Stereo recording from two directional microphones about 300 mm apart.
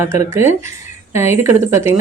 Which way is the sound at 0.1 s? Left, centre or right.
Centre.